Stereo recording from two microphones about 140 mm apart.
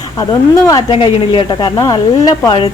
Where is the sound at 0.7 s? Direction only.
35° left (ahead or behind).